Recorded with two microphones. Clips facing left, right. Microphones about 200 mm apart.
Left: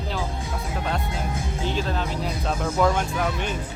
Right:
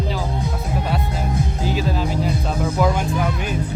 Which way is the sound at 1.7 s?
5° right (ahead or behind).